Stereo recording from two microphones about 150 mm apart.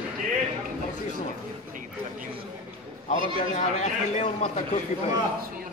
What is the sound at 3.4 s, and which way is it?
Speech, 50° left (ahead or behind).